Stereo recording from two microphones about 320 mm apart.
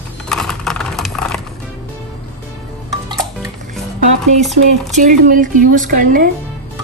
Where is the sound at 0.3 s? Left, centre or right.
Centre.